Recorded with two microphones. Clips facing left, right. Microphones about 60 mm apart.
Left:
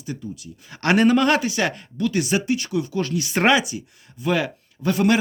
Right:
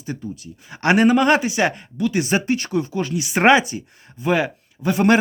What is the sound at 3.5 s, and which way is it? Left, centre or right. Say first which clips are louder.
Speech: right 6 dB; right.